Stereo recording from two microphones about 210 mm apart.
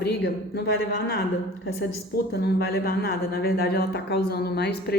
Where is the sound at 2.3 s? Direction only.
50° left (ahead or behind).